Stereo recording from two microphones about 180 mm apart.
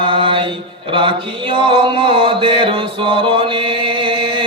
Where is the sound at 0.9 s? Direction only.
25° right (ahead or behind).